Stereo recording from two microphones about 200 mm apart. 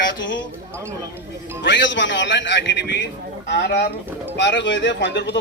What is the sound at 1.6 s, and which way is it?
A man's voice, 65° left (ahead or behind).